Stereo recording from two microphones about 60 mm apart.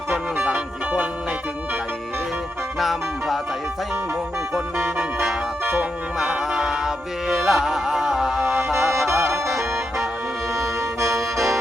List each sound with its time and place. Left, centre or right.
0.4 s music: centre
2.7 s music: centre
4.8 s music: right
5.7 s music: centre
8.5 s music: right
10.5 s music: right
11.2 s music: centre